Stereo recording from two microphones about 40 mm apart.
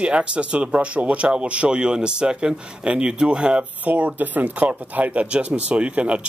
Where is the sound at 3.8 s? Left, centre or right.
Right.